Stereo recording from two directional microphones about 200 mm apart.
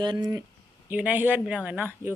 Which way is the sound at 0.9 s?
10° right (ahead or behind).